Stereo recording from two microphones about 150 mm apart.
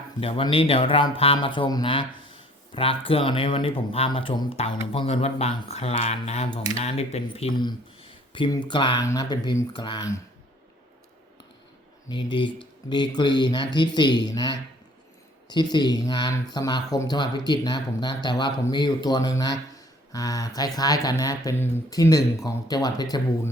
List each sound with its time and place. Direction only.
0.2 s speech: 40° left (ahead or behind)
7.5 s speech: 30° left (ahead or behind)
12.0 s speech: 30° left (ahead or behind)